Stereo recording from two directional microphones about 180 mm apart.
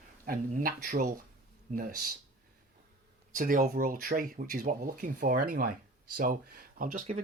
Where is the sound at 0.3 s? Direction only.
50° right (ahead or behind).